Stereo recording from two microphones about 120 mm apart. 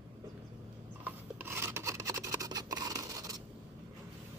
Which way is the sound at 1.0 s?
15° right (ahead or behind).